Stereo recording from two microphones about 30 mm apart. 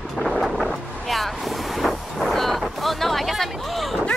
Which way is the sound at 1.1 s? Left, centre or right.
Centre.